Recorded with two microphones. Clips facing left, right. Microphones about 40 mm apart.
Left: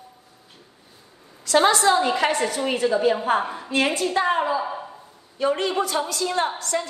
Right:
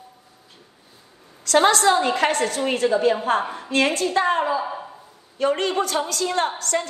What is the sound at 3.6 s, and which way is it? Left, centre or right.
Speech, right.